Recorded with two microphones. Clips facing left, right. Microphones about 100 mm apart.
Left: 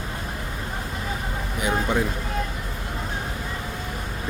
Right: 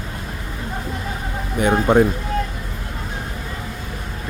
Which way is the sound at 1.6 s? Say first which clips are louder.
Right 9 dB; 55° right (ahead or behind).